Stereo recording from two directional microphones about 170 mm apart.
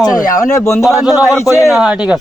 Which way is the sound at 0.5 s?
15° left (ahead or behind).